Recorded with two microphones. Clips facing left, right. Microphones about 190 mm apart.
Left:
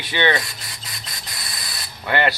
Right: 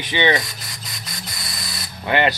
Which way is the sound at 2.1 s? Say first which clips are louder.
Right 2 dB; 20° right (ahead or behind).